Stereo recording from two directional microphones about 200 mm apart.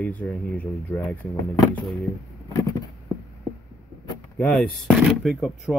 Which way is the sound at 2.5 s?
15° left (ahead or behind).